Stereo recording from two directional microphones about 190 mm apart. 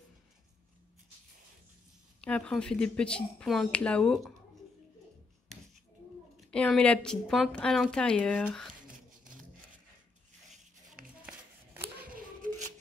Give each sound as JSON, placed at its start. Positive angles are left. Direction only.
{"t": 2.2, "sound": "speech", "side_deg": 5}
{"t": 6.3, "sound": "speech", "side_deg": 5}
{"t": 12.0, "sound": "scissors", "side_deg": -45}